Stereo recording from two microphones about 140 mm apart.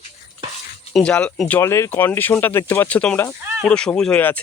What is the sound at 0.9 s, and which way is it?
Speech, 5° left (ahead or behind).